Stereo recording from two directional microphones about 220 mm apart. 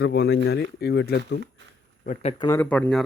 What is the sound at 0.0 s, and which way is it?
Speech, 50° left (ahead or behind).